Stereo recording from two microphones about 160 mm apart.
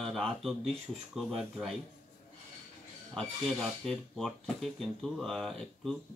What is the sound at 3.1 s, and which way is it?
Speech, 5° left (ahead or behind).